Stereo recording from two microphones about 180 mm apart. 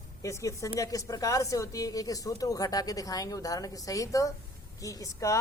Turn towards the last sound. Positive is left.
turn(degrees=15)  # may be behind; listen again after turning